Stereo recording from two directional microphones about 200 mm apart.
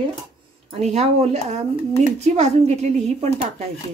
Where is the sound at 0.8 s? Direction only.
35° right (ahead or behind).